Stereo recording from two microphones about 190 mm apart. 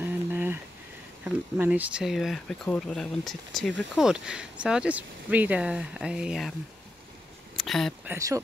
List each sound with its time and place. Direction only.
0.0 s a sound: 10° right (ahead or behind)
1.2 s speech: 5° right (ahead or behind)
7.5 s speech: centre (ahead or behind)
8.1 s speech: 15° right (ahead or behind)